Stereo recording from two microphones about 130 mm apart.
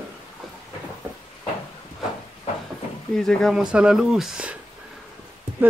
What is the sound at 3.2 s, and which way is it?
Speech, 5° left (ahead or behind).